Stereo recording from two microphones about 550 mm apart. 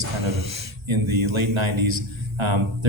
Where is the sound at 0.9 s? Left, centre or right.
Right.